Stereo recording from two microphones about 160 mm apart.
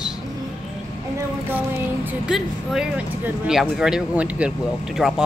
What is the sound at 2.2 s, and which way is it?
Speech, 5° right (ahead or behind).